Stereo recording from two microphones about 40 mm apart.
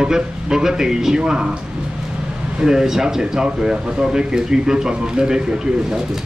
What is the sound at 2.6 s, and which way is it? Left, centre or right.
Speech, centre.